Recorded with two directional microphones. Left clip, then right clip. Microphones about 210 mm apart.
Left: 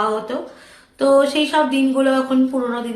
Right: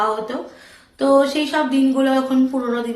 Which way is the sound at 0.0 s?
15° left (ahead or behind).